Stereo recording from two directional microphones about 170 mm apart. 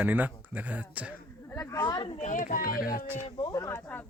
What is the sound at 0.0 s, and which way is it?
Speech, 10° right (ahead or behind).